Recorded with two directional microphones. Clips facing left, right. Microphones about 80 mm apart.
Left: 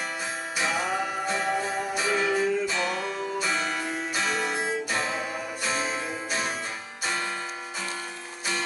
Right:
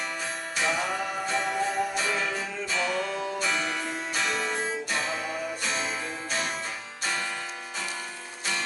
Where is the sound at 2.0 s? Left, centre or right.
Centre.